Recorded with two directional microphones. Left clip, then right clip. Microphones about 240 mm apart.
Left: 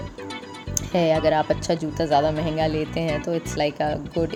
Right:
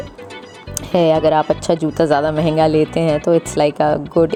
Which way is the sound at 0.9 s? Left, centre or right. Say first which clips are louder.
Right 7 dB; right.